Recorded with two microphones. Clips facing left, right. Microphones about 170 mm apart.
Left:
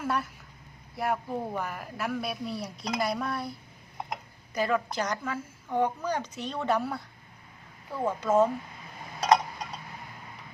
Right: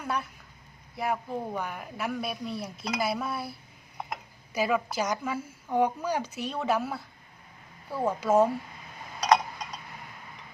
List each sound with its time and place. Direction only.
0.0 s speech: centre (ahead or behind)